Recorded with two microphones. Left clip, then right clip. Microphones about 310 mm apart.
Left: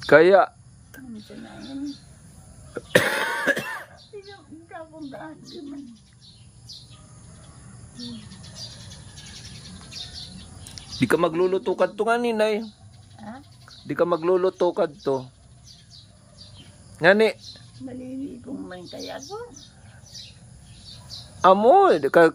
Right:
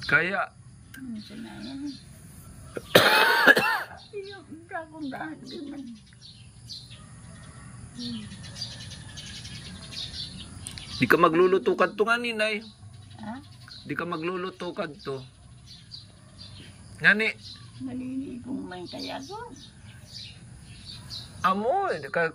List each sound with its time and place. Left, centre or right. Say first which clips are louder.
0.0 s speech: left 10 dB; centre
2.7 s cough: right 2 dB; centre
4.6 s speech: right 3 dB; centre
10.7 s speech: even; centre
13.8 s speech: left 10 dB; centre
17.0 s speech: left 4 dB; centre
21.4 s speech: left 10 dB; left